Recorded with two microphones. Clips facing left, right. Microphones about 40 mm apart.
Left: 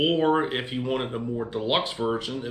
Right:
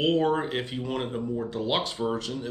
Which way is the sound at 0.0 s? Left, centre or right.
Centre.